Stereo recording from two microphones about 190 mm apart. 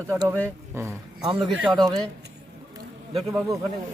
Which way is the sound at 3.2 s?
15° right (ahead or behind).